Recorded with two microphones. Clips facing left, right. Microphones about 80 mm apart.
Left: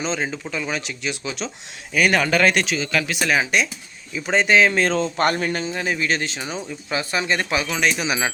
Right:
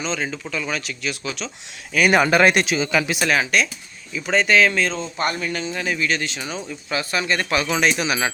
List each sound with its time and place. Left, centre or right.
0.0 s speech: left
2.0 s speech: centre
3.2 s speech: centre
4.1 s speech: left
5.1 s speech: left
5.5 s a man's voice: left; by 7.6 s centre
7.7 s speech: centre